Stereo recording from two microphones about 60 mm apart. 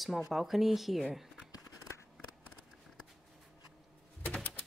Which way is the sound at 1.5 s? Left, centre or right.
Left.